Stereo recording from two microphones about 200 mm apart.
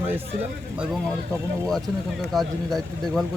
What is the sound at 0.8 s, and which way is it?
Speech, 5° left (ahead or behind).